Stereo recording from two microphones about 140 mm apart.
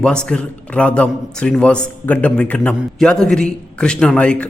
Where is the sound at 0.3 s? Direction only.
10° left (ahead or behind).